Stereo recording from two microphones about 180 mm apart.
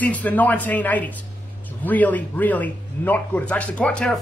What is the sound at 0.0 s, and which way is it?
Speech, 10° left (ahead or behind).